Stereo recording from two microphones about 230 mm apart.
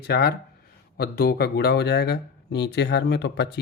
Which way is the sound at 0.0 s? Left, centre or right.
Left.